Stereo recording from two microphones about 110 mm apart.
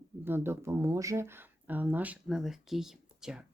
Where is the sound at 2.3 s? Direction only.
5° right (ahead or behind).